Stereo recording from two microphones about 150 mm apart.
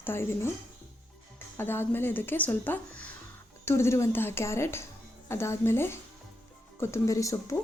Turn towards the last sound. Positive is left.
turn(degrees=20)  # may be behind; listen again after turning